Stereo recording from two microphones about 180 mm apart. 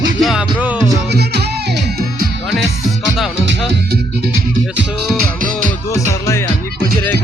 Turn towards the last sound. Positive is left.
turn(degrees=15)  # may be behind; listen again after turning